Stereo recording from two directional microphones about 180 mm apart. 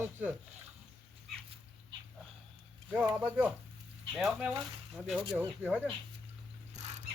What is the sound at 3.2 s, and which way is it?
Speech, 10° right (ahead or behind).